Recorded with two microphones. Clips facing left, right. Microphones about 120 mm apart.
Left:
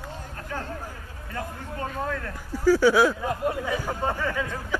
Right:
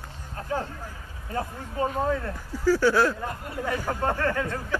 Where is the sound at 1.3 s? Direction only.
30° right (ahead or behind).